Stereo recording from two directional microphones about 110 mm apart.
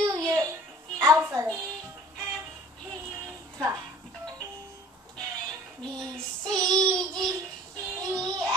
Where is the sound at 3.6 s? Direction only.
35° right (ahead or behind).